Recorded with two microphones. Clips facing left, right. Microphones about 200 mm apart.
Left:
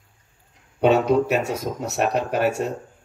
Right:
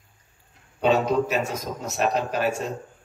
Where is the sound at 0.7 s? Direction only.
65° left (ahead or behind).